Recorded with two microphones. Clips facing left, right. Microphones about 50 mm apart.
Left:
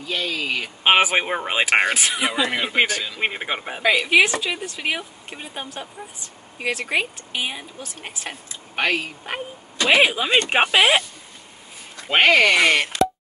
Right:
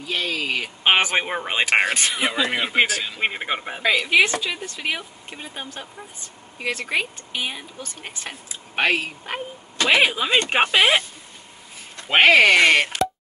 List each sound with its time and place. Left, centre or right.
0.0 s speech: centre
0.8 s a woman's voice: centre
8.7 s a woman's voice: centre
9.9 s a woman's voice: centre
12.1 s speech: centre
12.5 s speech: centre